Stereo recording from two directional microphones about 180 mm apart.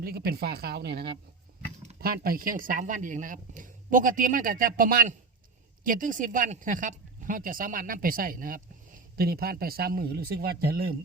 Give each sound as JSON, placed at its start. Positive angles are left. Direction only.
{"t": 0.0, "sound": "speech", "side_deg": -60}
{"t": 2.0, "sound": "speech", "side_deg": -55}